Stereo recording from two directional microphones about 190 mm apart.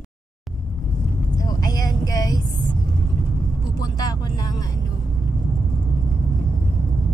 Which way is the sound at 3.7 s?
20° left (ahead or behind).